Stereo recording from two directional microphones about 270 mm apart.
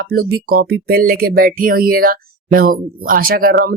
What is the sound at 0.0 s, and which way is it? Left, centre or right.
Speech, right.